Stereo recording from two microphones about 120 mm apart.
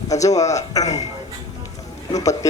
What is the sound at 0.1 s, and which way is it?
Speech, 30° left (ahead or behind).